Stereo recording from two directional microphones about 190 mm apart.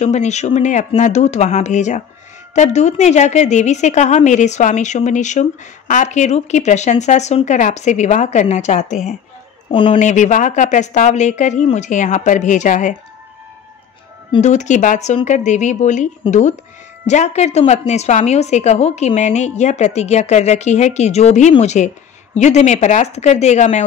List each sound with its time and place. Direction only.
0.0 s a woman's voice: 35° left (ahead or behind)
9.7 s a woman's voice: 30° left (ahead or behind)
14.3 s a woman's voice: 40° left (ahead or behind)